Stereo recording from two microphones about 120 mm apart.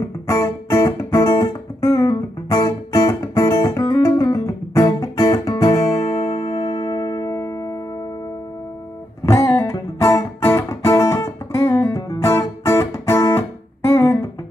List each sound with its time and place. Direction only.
0.3 s guitar: 25° left (ahead or behind)
3.6 s music: 25° left (ahead or behind)
9.2 s music: 25° left (ahead or behind)